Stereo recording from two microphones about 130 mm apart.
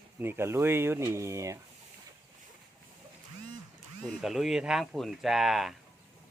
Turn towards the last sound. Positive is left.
turn(degrees=0)  # may be behind; listen again after turning